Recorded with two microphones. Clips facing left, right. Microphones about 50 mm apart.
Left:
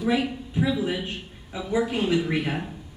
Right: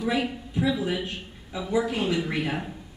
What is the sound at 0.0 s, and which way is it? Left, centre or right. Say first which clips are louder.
A man's voice: left 2 dB; centre.